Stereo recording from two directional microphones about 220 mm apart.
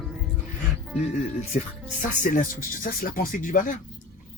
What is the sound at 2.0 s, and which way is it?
Speech, 40° left (ahead or behind).